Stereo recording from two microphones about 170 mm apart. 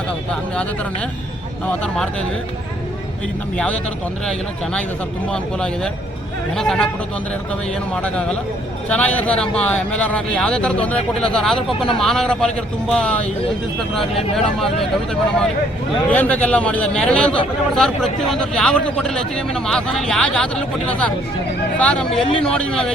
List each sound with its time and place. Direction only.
0.3 s a man's voice: 5° left (ahead or behind)
5.3 s speech: 5° left (ahead or behind)
8.0 s a man's voice: 5° left (ahead or behind)
14.3 s a man's voice: centre (ahead or behind)